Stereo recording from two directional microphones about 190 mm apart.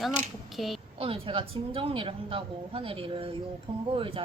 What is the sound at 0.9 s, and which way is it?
Speech, 30° right (ahead or behind).